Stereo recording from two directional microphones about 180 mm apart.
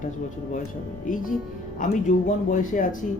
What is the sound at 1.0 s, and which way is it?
Speech, 50° left (ahead or behind).